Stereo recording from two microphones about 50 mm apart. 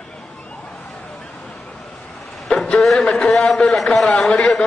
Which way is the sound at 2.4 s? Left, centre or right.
Centre.